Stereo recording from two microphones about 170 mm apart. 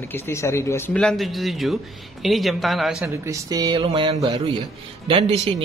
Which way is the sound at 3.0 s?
15° right (ahead or behind).